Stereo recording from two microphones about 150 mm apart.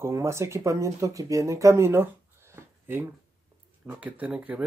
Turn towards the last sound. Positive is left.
turn(degrees=-10)  # may be behind; listen again after turning